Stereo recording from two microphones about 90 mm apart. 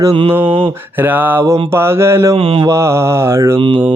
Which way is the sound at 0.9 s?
20° right (ahead or behind).